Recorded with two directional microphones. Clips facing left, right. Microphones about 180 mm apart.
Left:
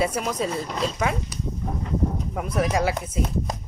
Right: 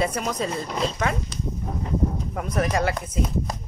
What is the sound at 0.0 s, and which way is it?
Speech, 5° left (ahead or behind).